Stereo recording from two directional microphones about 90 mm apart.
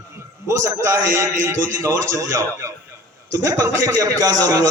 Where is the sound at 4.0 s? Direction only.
40° right (ahead or behind).